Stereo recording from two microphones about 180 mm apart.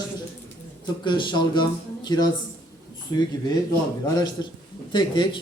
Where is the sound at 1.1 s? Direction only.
25° left (ahead or behind).